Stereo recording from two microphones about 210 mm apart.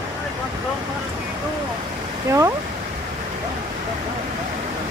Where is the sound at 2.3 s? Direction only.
15° right (ahead or behind).